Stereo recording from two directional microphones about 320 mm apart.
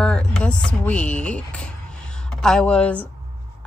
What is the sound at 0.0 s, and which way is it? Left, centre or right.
A woman's voice, centre.